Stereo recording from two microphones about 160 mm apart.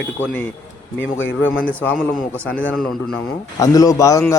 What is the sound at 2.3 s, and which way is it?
Speech, 10° left (ahead or behind).